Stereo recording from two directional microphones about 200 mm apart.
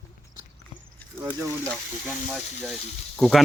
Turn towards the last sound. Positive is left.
turn(degrees=0)  # may be behind; listen again after turning